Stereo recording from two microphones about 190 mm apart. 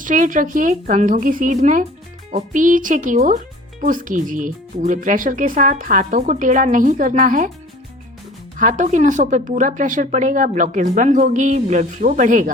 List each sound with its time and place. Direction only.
0.0 s speech: 45° right (ahead or behind)
8.5 s a woman's voice: 40° right (ahead or behind)